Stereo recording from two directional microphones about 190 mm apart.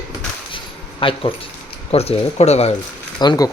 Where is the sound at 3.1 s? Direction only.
20° left (ahead or behind).